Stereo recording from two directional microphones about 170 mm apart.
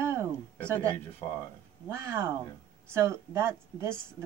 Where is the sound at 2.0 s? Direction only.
15° right (ahead or behind).